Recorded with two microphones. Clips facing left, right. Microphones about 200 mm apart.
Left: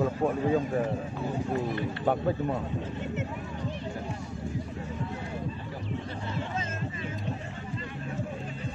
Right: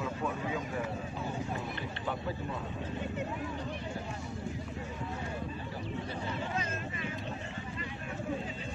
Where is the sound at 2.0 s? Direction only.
50° left (ahead or behind).